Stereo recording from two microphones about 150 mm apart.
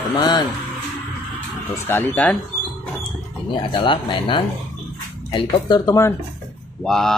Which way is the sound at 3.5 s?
35° left (ahead or behind).